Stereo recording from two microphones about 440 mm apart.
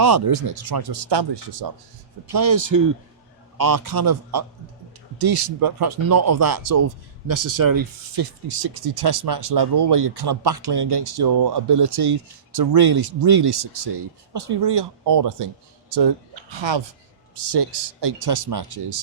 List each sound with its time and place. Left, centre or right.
0.0 s speech: right
2.3 s speech: right
17.5 s speech: right